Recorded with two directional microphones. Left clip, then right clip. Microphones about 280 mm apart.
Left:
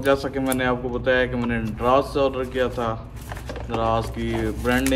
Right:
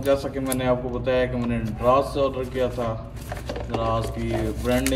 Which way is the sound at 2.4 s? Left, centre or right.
Centre.